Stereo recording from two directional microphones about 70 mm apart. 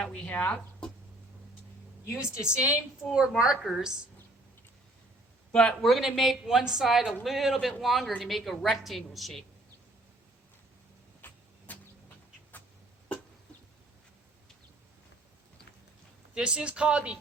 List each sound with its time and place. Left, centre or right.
0.0 s speech: centre
2.4 s a woman's voice: centre
3.6 s speech: centre
5.5 s a man's voice: centre
5.9 s speech: centre
11.2 s vehicle: left
16.3 s speech: centre